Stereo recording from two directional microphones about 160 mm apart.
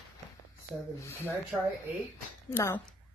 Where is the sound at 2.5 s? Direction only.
10° left (ahead or behind).